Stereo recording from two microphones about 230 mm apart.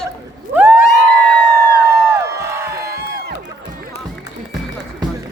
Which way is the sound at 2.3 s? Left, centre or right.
Centre.